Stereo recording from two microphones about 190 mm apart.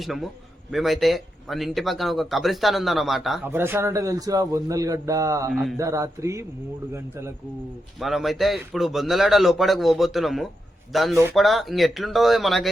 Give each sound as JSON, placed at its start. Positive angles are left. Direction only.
{"t": 0.0, "sound": "a man's voice", "side_deg": 0}
{"t": 3.4, "sound": "speech", "side_deg": -10}
{"t": 5.5, "sound": "a man's voice", "side_deg": 0}
{"t": 5.7, "sound": "speech", "side_deg": -15}
{"t": 7.9, "sound": "a man's voice", "side_deg": 0}